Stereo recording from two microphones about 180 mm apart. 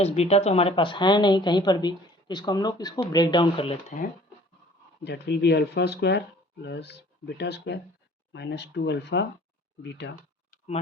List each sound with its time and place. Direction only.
0.0 s a woman's voice: 35° left (ahead or behind)
5.0 s speech: 70° left (ahead or behind)